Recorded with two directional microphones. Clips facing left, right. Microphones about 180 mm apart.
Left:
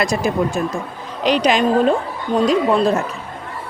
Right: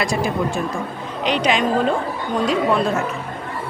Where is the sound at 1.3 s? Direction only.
40° left (ahead or behind).